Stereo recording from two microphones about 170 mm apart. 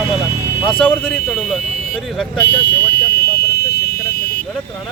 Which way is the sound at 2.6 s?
75° left (ahead or behind).